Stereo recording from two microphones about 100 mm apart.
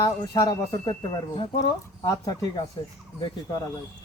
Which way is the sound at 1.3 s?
50° left (ahead or behind).